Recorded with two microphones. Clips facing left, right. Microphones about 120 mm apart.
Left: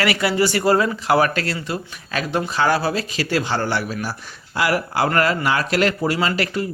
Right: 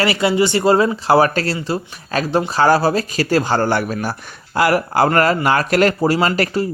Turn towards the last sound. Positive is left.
turn(degrees=-40)  # may be behind; listen again after turning